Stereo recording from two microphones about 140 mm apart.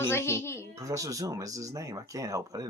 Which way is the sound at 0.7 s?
25° right (ahead or behind).